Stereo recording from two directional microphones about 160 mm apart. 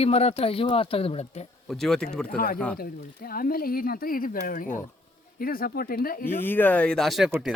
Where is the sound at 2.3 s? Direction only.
60° left (ahead or behind).